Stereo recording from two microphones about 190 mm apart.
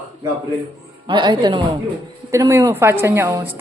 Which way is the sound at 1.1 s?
25° right (ahead or behind).